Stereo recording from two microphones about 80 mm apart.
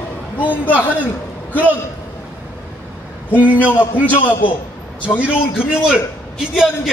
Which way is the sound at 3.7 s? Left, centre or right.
Left.